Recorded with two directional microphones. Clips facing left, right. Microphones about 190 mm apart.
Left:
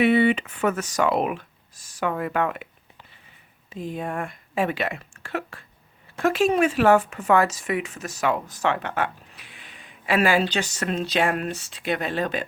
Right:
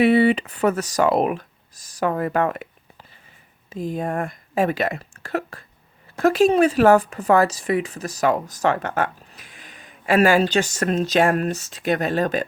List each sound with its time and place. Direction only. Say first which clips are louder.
0.0 s a woman's voice: right 3 dB; 35° right (ahead or behind)